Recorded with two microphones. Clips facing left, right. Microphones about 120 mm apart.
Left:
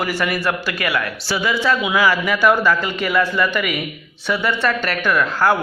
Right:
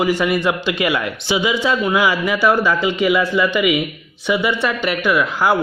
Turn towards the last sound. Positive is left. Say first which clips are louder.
# right 1 dB
turn(degrees=-10)  # may be behind; listen again after turning